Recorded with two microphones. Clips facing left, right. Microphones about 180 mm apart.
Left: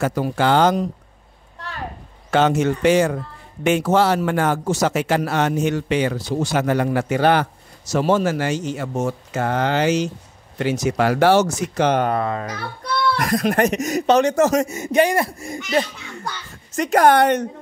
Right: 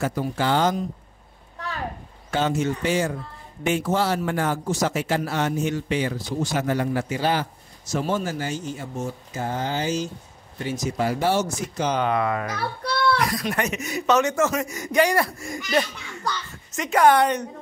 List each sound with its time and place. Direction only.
0.0 s a man's voice: 75° left (ahead or behind)
2.3 s a man's voice: 75° left (ahead or behind)
12.0 s speech: 35° left (ahead or behind)
13.1 s speech: 55° left (ahead or behind)
14.7 s speech: 25° left (ahead or behind)
17.0 s a woman's voice: 60° left (ahead or behind)